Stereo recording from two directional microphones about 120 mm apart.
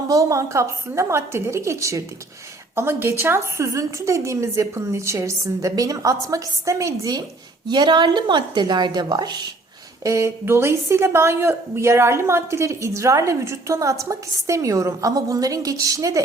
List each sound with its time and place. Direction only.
0.1 s a woman's voice: 25° right (ahead or behind)
10.0 s a woman's voice: 25° right (ahead or behind)